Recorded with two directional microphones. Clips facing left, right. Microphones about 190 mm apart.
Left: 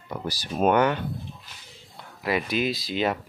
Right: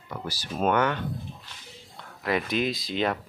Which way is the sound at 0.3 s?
15° left (ahead or behind).